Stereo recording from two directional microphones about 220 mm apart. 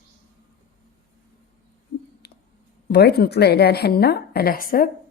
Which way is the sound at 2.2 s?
45° left (ahead or behind).